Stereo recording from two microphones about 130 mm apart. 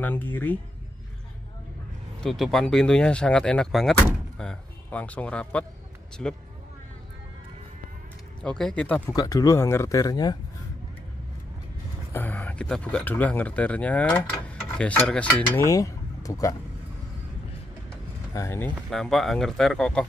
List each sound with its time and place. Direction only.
0.0 s speech: 15° left (ahead or behind)
2.2 s speech: centre (ahead or behind)
8.4 s speech: 5° left (ahead or behind)
9.1 s speech: 25° left (ahead or behind)
12.1 s a sound: 15° left (ahead or behind)
12.4 s speech: 5° left (ahead or behind)
15.6 s speech: 25° left (ahead or behind)
18.3 s speech: 20° left (ahead or behind)
18.9 s speech: centre (ahead or behind)